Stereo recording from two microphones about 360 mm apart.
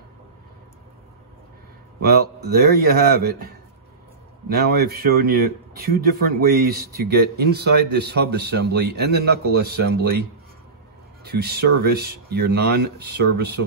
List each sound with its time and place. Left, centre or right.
2.0 s speech: right
4.6 s speech: right
11.2 s speech: right